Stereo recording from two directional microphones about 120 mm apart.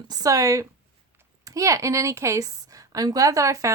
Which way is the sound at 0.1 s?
30° right (ahead or behind).